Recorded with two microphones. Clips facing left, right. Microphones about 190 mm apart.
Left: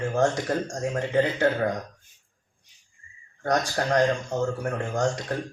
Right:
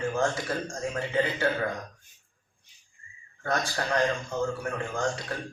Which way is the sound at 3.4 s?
40° left (ahead or behind).